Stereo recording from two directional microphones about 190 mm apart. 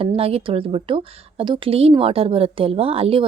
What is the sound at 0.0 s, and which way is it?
A woman's voice, 30° right (ahead or behind).